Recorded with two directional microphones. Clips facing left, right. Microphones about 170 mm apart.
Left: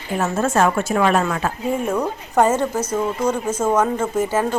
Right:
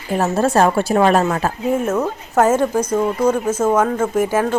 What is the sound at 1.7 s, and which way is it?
A woman's voice, 5° right (ahead or behind).